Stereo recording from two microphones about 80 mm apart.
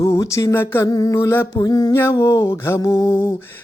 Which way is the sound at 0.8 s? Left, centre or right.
Left.